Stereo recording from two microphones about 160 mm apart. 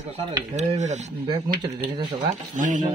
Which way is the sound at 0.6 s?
45° right (ahead or behind).